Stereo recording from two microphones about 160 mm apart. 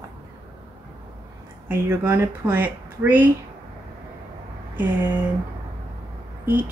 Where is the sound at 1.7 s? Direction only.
15° right (ahead or behind).